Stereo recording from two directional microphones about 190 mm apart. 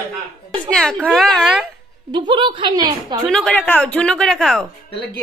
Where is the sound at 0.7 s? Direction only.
5° left (ahead or behind).